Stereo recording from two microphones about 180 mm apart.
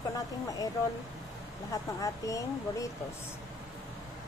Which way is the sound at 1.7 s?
20° left (ahead or behind).